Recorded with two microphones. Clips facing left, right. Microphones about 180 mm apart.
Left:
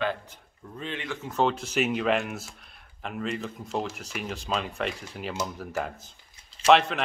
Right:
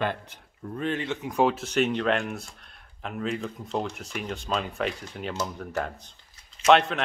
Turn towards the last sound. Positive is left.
turn(degrees=0)  # may be behind; listen again after turning